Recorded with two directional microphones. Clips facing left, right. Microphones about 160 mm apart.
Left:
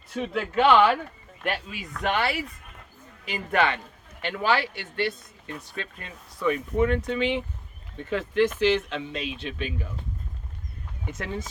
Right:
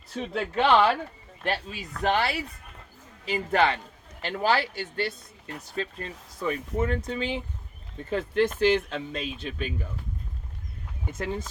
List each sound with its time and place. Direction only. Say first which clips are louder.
0.1 s speech: left 2 dB; 35° right (ahead or behind)